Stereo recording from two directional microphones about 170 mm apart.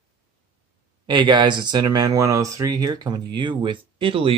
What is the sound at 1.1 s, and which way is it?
Speech, 25° right (ahead or behind).